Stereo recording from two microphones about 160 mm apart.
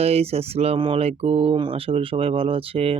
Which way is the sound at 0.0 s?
40° right (ahead or behind).